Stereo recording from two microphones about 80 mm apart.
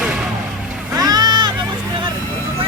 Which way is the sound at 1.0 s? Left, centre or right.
Right.